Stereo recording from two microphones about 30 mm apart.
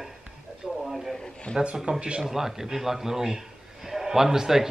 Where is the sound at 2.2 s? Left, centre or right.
Centre.